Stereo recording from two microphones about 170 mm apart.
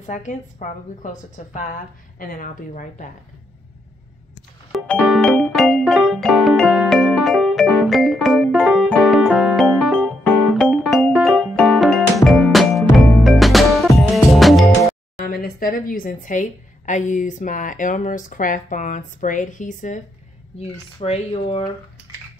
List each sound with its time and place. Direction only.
0.0 s speech: 45° left (ahead or behind)
4.7 s music: 5° left (ahead or behind)
15.1 s speech: 60° left (ahead or behind)
20.5 s speech: 35° left (ahead or behind)